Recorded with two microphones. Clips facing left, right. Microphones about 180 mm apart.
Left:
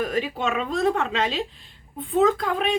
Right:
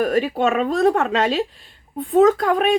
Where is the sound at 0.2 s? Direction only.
45° right (ahead or behind).